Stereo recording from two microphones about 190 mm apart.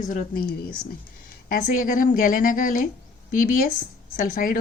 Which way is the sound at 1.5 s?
45° left (ahead or behind).